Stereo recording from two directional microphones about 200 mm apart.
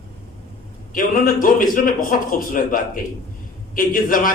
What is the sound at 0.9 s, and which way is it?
A man's voice, 45° left (ahead or behind).